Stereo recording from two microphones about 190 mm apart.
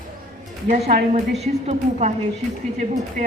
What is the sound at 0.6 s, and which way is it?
A woman's voice, 35° right (ahead or behind).